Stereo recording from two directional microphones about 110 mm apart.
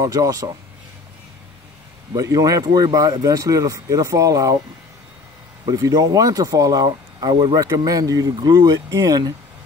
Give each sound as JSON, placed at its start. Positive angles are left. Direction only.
{"t": 0.0, "sound": "speech", "side_deg": -35}
{"t": 2.1, "sound": "speech", "side_deg": -30}
{"t": 5.7, "sound": "speech", "side_deg": -35}